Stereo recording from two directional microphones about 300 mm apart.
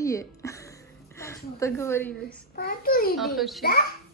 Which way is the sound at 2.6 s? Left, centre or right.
Left.